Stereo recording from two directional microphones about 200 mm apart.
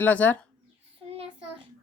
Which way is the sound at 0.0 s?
10° left (ahead or behind).